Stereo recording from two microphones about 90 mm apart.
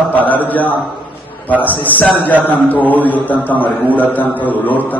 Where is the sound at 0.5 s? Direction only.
20° left (ahead or behind).